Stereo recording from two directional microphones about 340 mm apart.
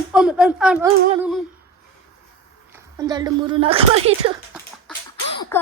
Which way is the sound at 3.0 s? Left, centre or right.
Centre.